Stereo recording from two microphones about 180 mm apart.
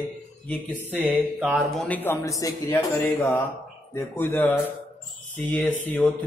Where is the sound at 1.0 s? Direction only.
10° right (ahead or behind).